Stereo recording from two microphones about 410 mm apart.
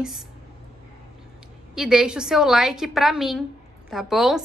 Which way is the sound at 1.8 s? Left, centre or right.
Centre.